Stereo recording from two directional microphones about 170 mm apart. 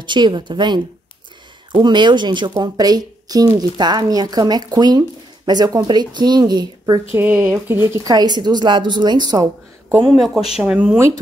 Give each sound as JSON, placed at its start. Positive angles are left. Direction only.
{"t": 0.0, "sound": "speech", "side_deg": -25}
{"t": 7.1, "sound": "speech", "side_deg": -10}